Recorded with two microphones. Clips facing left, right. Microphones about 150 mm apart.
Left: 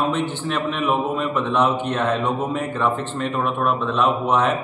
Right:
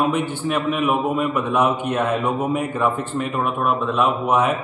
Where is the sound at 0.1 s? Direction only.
10° right (ahead or behind).